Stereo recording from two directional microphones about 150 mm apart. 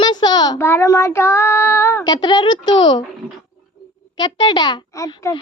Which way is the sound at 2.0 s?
30° left (ahead or behind).